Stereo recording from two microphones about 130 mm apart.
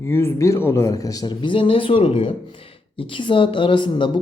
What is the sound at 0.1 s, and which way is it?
A man's voice, 20° left (ahead or behind).